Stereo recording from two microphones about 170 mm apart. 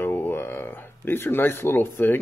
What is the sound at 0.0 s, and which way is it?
Speech, 15° left (ahead or behind).